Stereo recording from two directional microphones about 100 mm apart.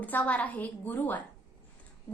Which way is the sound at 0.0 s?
15° left (ahead or behind).